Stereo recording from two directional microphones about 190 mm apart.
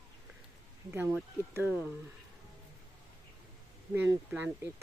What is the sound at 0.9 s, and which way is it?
Speech, 15° right (ahead or behind).